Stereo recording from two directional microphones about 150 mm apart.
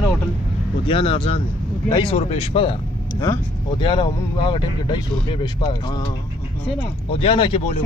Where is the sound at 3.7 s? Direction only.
30° left (ahead or behind).